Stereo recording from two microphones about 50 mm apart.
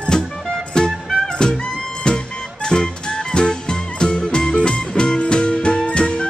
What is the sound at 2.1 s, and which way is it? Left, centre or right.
Music, centre.